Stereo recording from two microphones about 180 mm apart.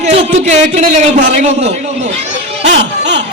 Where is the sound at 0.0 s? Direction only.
40° right (ahead or behind).